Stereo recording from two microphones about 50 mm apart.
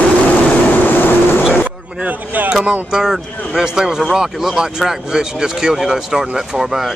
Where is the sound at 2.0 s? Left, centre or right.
Right.